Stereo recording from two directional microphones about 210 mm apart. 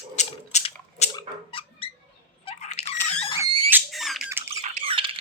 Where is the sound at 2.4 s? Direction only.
30° left (ahead or behind).